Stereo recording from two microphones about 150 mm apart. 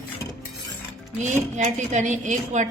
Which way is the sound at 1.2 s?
55° right (ahead or behind).